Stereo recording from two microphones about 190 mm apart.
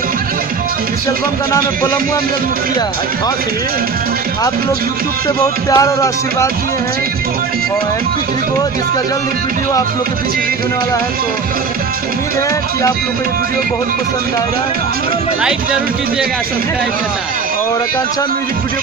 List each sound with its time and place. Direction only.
5.7 s music: 15° left (ahead or behind)